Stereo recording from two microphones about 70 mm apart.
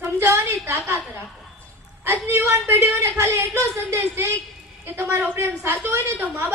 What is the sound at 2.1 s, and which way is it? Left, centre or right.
A woman's voice, right.